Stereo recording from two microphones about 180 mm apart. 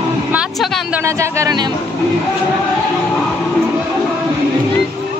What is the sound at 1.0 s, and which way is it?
Speech, 15° right (ahead or behind).